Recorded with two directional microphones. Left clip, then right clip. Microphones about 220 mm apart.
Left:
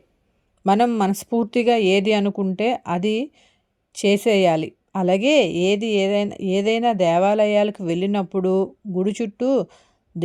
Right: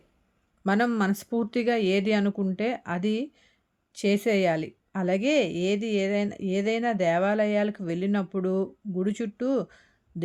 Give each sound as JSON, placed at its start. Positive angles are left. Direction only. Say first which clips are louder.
{"t": 0.6, "sound": "speech", "louder": "left 8 dB", "side_deg": 25}